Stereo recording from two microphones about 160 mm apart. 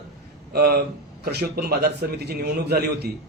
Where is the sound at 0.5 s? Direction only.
75° right (ahead or behind).